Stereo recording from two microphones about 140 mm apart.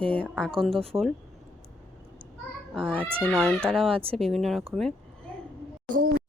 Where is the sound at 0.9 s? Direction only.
15° right (ahead or behind).